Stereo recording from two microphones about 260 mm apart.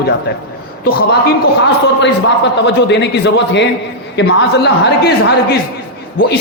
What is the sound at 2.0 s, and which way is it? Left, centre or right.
A man's voice, left.